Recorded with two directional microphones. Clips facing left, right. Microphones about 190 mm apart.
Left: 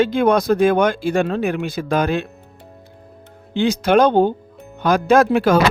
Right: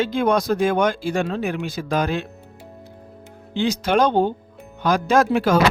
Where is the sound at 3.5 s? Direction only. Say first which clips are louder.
Left 4 dB; 55° left (ahead or behind).